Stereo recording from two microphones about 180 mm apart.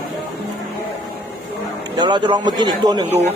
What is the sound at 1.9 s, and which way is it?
Speech, 25° right (ahead or behind).